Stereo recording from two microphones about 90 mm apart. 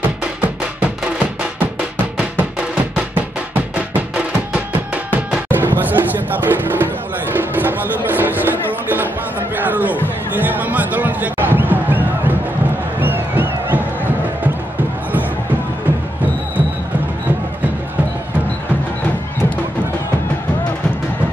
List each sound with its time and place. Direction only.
1.8 s music: 15° right (ahead or behind)
4.6 s music: 15° right (ahead or behind)
9.6 s a sound: 20° right (ahead or behind)
10.0 s music: 20° right (ahead or behind)